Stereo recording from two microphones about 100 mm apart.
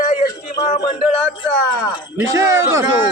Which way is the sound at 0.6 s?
75° left (ahead or behind).